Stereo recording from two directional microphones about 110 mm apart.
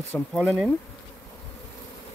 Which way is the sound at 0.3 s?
5° left (ahead or behind).